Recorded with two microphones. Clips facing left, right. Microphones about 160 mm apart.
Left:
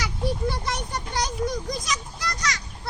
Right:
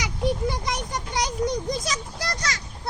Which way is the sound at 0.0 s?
15° right (ahead or behind).